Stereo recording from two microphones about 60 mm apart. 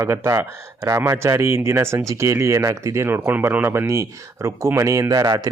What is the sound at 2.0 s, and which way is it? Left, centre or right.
Speech, right.